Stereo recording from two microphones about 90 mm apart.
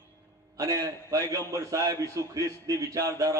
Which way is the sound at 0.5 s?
40° right (ahead or behind).